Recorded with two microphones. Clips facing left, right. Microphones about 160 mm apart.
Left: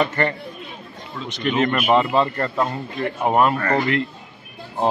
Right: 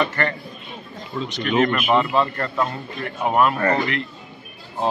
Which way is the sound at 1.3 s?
25° left (ahead or behind).